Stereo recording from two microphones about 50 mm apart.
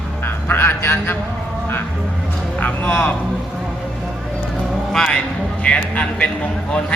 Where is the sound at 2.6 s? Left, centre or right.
Left.